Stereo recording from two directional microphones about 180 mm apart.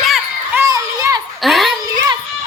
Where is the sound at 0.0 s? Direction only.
Centre (ahead or behind).